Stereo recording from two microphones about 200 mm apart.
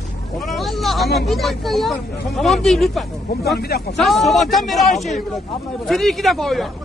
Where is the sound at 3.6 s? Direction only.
50° left (ahead or behind).